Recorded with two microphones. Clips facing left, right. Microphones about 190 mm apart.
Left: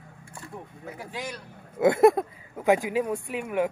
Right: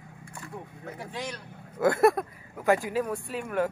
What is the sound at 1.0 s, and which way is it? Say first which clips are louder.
Speech: even; 5° left (ahead or behind).